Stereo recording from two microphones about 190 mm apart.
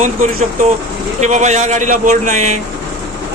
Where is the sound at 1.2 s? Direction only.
40° right (ahead or behind).